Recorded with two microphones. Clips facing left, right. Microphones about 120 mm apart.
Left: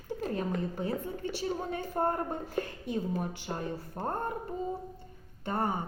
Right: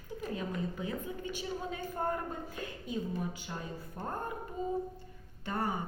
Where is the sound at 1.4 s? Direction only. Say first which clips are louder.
Left 6 dB; 50° left (ahead or behind).